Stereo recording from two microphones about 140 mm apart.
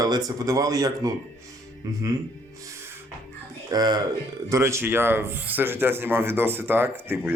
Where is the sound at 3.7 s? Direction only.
30° right (ahead or behind).